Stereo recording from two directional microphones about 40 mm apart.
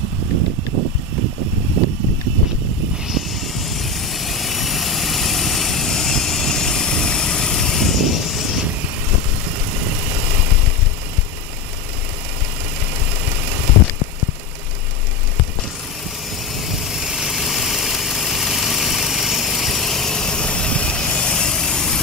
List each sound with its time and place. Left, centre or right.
3.1 s vehicle: centre
16.5 s vehicle: centre